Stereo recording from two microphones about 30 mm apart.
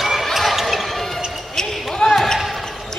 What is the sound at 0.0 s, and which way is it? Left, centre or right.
Basketball bounce, centre.